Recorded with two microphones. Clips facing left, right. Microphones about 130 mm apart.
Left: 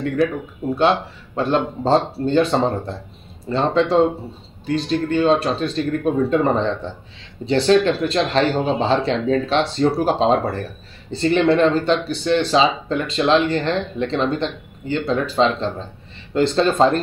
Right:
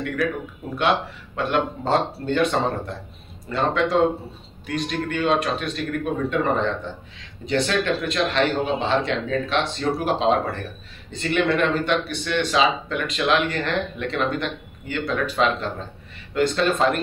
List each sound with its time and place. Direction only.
0.2 s speech: 25° left (ahead or behind)